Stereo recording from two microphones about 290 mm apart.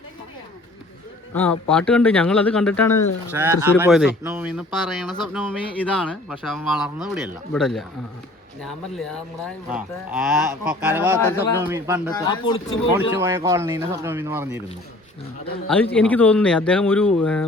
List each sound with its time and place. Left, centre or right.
1.3 s speech: centre
3.3 s speech: centre
12.1 s speech: centre
13.1 s speech: centre
15.6 s speech: centre